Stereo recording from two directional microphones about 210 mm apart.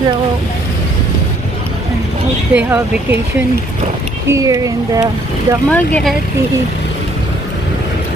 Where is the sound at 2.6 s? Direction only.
10° right (ahead or behind).